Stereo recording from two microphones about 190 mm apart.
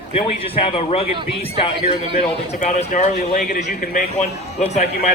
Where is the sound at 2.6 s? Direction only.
40° left (ahead or behind).